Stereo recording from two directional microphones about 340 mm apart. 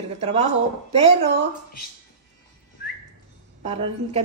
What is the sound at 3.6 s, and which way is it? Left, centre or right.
Speech, centre.